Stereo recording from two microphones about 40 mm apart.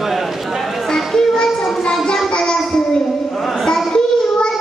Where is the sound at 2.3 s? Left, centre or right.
Centre.